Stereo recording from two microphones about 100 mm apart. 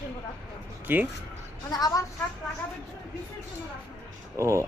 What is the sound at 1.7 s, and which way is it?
Speech, 40° left (ahead or behind).